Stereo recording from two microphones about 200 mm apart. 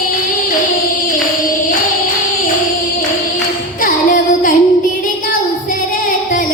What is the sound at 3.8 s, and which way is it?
Music, 45° left (ahead or behind).